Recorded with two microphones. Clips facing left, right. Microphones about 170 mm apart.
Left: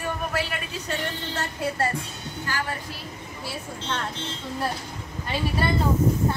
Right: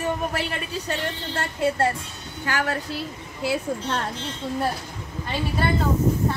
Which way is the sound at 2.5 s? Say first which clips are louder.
Right 5 dB; 75° right (ahead or behind).